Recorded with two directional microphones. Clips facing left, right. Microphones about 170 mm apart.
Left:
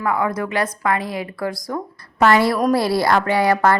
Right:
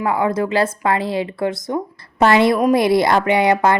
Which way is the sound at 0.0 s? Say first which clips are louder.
Right 3 dB; 25° right (ahead or behind).